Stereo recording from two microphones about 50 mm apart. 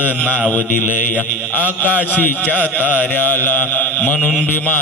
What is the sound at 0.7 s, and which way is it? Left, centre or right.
Mantra, left.